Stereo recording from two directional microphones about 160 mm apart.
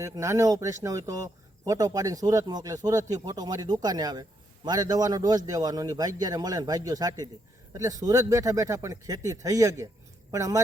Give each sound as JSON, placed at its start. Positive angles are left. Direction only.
{"t": 0.0, "sound": "a man's voice", "side_deg": -20}